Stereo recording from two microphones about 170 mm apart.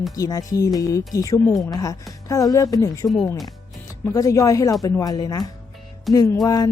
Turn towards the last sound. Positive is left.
turn(degrees=20)  # may be behind; listen again after turning